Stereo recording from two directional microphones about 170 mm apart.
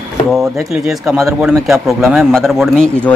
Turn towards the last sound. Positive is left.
turn(degrees=5)  # may be behind; listen again after turning